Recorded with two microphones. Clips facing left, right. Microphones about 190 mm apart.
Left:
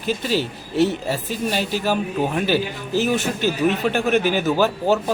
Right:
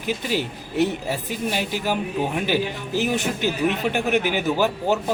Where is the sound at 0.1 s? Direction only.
15° right (ahead or behind).